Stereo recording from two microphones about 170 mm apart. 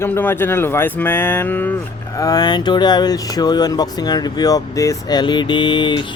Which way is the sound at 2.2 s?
20° left (ahead or behind).